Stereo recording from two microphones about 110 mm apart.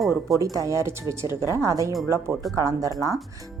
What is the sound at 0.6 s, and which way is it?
Speech, 25° right (ahead or behind).